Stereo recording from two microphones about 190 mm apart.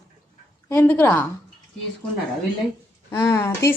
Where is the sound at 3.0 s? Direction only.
20° left (ahead or behind).